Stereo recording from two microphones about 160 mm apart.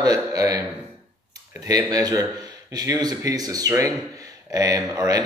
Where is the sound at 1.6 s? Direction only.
25° right (ahead or behind).